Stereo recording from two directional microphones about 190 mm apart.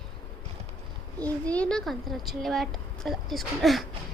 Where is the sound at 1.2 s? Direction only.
5° left (ahead or behind).